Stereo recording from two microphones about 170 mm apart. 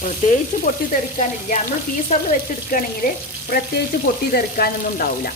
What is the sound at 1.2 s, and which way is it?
Frying, 50° left (ahead or behind).